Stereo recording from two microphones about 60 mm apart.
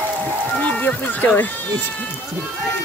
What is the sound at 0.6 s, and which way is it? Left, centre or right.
Speech, left.